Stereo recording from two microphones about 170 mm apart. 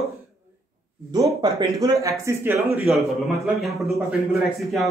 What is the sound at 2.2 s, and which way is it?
Speech, 10° right (ahead or behind).